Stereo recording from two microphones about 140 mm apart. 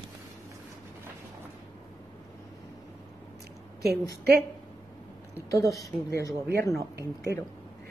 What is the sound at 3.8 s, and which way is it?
Speech, 90° right.